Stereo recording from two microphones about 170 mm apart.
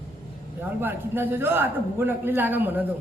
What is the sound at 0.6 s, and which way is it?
A man's voice, 10° right (ahead or behind).